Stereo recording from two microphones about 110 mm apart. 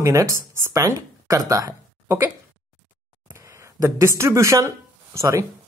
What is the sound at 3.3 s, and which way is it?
Speech, 25° right (ahead or behind).